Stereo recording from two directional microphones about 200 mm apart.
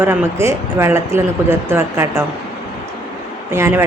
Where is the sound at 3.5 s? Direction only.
10° right (ahead or behind).